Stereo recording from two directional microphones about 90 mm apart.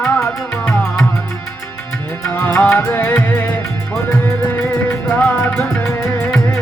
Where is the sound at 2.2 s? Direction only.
25° left (ahead or behind).